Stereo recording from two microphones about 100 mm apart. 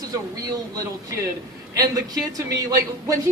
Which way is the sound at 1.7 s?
35° right (ahead or behind).